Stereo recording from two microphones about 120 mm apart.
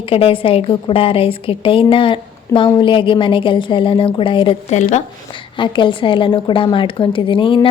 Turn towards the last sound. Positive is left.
turn(degrees=45)  # may be behind; listen again after turning